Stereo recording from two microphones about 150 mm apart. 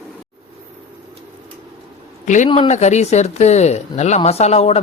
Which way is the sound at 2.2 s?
55° left (ahead or behind).